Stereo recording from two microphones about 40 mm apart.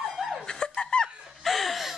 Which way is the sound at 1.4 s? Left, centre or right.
Centre.